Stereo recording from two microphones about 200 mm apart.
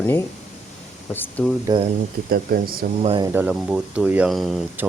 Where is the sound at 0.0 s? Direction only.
10° left (ahead or behind).